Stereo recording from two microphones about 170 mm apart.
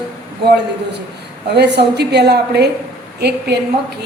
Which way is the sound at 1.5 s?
75° right (ahead or behind).